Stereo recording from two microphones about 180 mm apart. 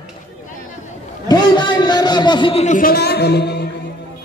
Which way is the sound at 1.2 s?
25° left (ahead or behind).